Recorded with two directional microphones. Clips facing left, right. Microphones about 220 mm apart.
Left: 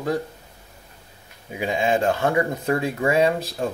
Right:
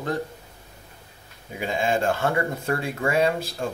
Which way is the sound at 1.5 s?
15° left (ahead or behind).